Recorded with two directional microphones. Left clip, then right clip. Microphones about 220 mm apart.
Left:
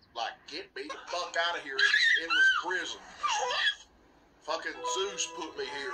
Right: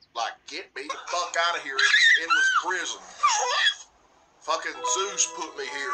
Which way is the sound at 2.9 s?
60° right (ahead or behind).